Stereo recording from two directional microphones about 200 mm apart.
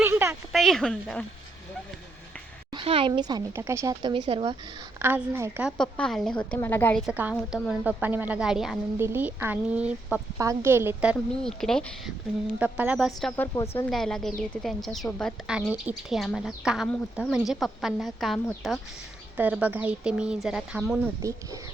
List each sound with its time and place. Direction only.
0.0 s a sound: 10° right (ahead or behind)
0.5 s speech: centre (ahead or behind)
2.7 s speech: 25° right (ahead or behind)
4.9 s a woman's voice: 10° right (ahead or behind)
5.7 s speech: 5° left (ahead or behind)
7.0 s a woman's voice: 5° right (ahead or behind)
13.3 s speech: 10° left (ahead or behind)
19.4 s speech: 10° right (ahead or behind)
21.2 s a woman's voice: 15° right (ahead or behind)